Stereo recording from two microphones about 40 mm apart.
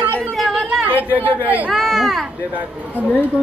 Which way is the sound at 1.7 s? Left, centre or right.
Centre.